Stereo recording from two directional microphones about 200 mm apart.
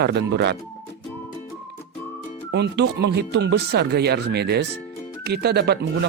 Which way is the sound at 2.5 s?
60° right (ahead or behind).